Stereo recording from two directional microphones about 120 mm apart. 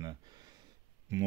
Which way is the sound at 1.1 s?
25° right (ahead or behind).